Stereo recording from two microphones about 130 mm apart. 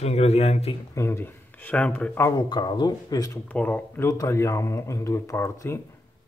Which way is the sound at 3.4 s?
10° left (ahead or behind).